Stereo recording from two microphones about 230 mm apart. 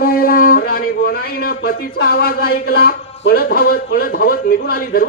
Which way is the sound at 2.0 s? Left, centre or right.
Left.